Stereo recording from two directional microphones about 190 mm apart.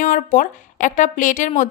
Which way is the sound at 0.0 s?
45° left (ahead or behind).